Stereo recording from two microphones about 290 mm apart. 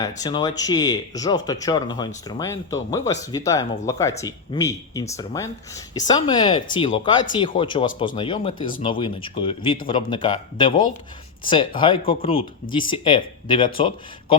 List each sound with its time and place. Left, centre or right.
0.2 s speech: centre